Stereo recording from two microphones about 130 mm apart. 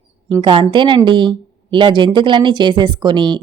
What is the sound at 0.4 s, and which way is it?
Speech, 40° right (ahead or behind).